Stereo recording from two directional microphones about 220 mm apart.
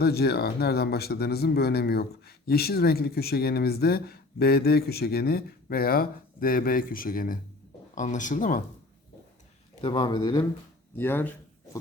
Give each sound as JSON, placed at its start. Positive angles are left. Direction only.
{"t": 0.0, "sound": "speech", "side_deg": 45}
{"t": 9.8, "sound": "speech", "side_deg": 20}